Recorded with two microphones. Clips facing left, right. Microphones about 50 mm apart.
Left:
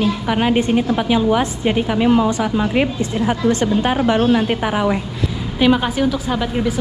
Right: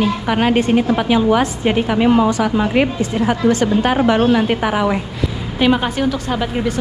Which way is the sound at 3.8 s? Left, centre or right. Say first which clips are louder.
Right 2 dB; right.